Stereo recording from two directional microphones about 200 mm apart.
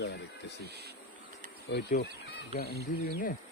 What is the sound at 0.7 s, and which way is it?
Speech, 55° right (ahead or behind).